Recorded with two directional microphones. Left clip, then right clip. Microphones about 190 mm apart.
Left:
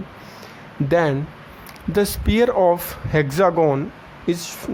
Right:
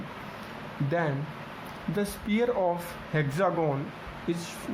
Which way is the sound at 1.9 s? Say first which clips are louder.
Left 11 dB; 55° left (ahead or behind).